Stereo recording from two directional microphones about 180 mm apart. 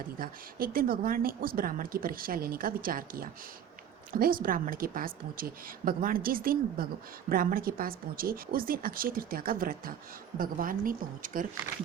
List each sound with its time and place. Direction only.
0.2 s speech: 55° right (ahead or behind)